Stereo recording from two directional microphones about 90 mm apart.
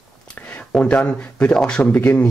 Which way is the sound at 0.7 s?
15° left (ahead or behind).